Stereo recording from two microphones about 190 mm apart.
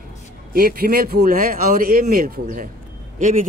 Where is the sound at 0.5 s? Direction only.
50° right (ahead or behind).